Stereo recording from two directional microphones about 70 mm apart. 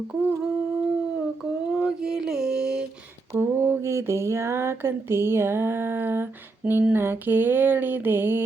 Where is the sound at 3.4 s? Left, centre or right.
Right.